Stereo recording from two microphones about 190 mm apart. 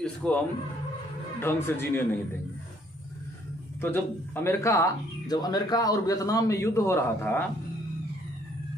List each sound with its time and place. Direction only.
0.0 s speech: 5° left (ahead or behind)
1.4 s speech: 10° left (ahead or behind)
3.8 s speech: 10° left (ahead or behind)